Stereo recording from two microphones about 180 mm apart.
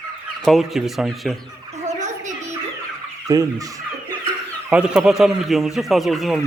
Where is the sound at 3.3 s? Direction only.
20° right (ahead or behind).